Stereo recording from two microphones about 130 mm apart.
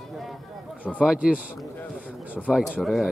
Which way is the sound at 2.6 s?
5° left (ahead or behind).